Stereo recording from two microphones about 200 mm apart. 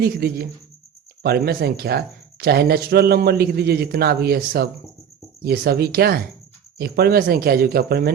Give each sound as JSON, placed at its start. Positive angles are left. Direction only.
{"t": 0.0, "sound": "speech", "side_deg": -50}